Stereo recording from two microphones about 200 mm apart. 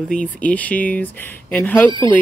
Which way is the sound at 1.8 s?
25° right (ahead or behind).